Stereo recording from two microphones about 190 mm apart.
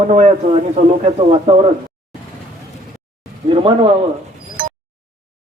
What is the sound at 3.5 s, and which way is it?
Speech, 30° right (ahead or behind).